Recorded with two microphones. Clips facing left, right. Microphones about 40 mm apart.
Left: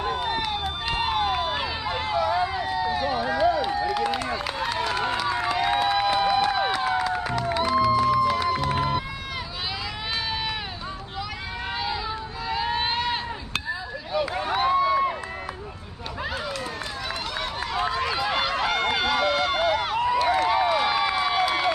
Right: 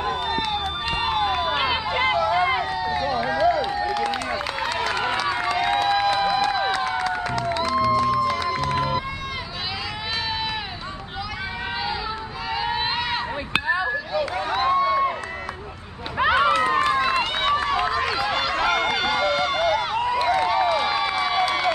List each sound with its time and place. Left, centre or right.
0.3 s run: centre
1.5 s a sound: right
2.3 s run: right
2.6 s run: centre
5.5 s run: centre
6.0 s music: centre
12.4 s a sound: centre
13.7 s a sound: right
14.1 s run: centre
16.2 s run: right
17.8 s run: centre
18.1 s run: centre
20.4 s a sound: centre